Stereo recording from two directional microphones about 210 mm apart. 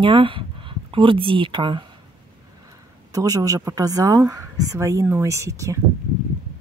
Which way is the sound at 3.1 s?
15° right (ahead or behind).